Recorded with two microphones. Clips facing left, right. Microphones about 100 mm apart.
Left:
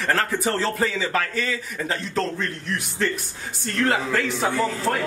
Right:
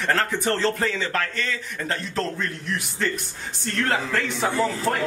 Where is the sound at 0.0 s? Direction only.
Centre (ahead or behind).